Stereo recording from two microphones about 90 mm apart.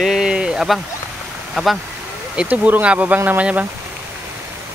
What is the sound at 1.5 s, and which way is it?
Speech, centre (ahead or behind).